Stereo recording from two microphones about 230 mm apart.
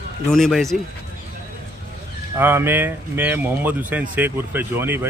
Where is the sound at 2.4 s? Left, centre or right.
Centre.